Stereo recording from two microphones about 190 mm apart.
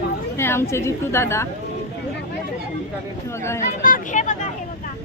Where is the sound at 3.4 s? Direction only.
15° left (ahead or behind).